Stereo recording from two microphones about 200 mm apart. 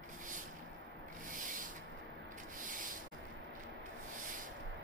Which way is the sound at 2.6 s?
40° right (ahead or behind).